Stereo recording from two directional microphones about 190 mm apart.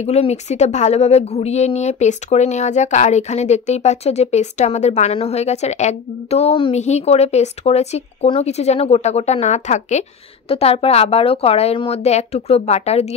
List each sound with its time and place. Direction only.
0.0 s speech: 35° left (ahead or behind)